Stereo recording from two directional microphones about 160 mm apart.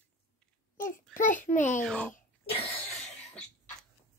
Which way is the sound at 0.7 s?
55° left (ahead or behind).